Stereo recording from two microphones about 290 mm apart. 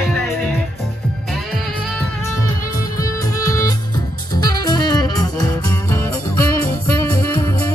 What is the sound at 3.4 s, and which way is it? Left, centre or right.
Music, centre.